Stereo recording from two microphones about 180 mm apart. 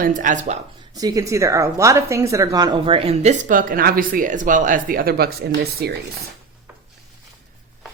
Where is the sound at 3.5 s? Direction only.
50° right (ahead or behind).